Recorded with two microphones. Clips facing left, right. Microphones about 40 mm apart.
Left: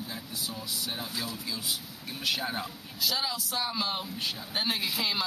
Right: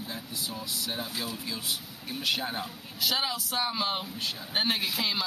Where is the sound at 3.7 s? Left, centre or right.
Centre.